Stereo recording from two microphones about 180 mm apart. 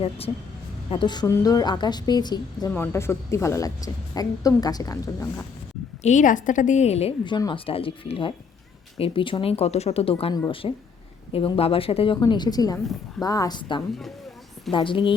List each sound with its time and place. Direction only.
0.9 s a woman's voice: 25° left (ahead or behind)
6.0 s a woman's voice: 40° left (ahead or behind)